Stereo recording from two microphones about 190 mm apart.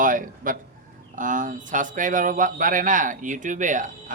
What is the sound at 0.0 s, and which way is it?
A man's voice, 45° right (ahead or behind).